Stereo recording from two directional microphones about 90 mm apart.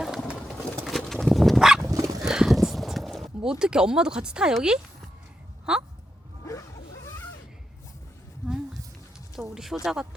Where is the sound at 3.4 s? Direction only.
10° right (ahead or behind).